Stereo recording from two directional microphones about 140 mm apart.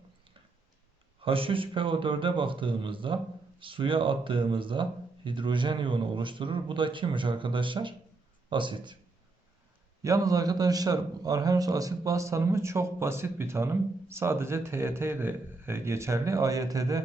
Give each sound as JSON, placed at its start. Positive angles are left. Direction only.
{"t": 1.2, "sound": "speech", "side_deg": -40}
{"t": 10.0, "sound": "a man's voice", "side_deg": -25}